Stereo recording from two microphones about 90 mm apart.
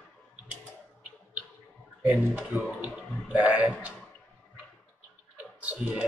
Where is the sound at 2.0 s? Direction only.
15° right (ahead or behind).